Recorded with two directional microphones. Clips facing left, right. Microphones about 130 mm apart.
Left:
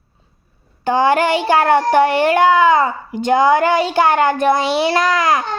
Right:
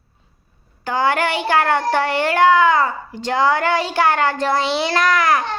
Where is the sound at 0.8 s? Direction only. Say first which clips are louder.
Left 5 dB; 20° left (ahead or behind).